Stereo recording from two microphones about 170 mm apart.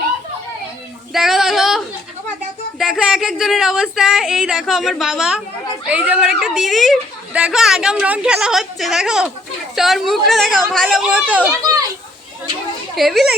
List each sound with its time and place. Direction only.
1.1 s child singing: centre (ahead or behind)
2.7 s a child's voice: centre (ahead or behind)
11.6 s children playing: 20° right (ahead or behind)
13.0 s a child's voice: centre (ahead or behind)